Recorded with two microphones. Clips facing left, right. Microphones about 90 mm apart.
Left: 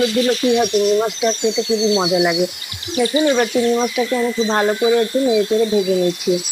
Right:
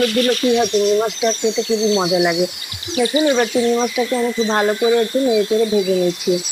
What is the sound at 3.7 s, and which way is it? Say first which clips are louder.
Speech: even; 5° left (ahead or behind).